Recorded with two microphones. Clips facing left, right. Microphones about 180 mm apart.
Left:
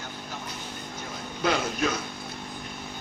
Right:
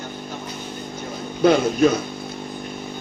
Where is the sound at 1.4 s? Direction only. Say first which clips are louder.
Right 11 dB; 45° right (ahead or behind).